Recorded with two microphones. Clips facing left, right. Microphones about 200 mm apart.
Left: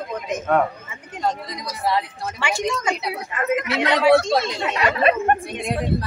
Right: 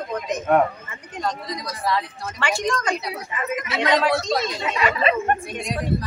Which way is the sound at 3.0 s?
60° left (ahead or behind).